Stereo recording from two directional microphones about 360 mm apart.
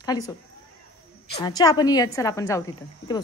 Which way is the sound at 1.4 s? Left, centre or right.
Centre.